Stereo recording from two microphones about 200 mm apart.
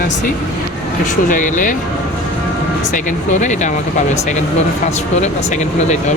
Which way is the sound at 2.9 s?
40° left (ahead or behind).